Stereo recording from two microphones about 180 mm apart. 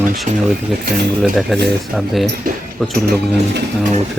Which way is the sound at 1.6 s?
Centre (ahead or behind).